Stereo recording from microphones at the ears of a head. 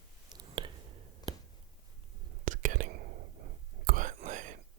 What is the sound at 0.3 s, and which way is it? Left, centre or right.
Whispering, right.